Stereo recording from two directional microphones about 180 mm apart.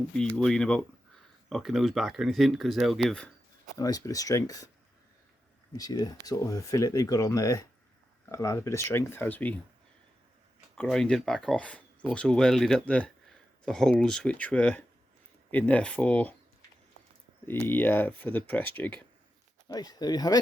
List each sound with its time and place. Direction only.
0.2 s speech: 5° left (ahead or behind)
3.8 s speech: 20° left (ahead or behind)
5.7 s speech: 20° left (ahead or behind)
10.8 s speech: 5° left (ahead or behind)
17.4 s speech: 10° left (ahead or behind)
19.6 s speech: 20° left (ahead or behind)